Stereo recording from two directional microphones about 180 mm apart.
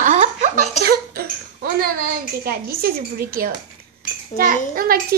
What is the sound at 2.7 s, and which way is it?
A child's voice, 55° right (ahead or behind).